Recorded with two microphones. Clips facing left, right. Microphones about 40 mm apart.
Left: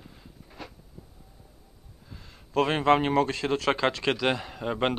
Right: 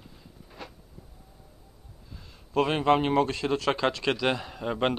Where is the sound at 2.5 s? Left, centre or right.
Left.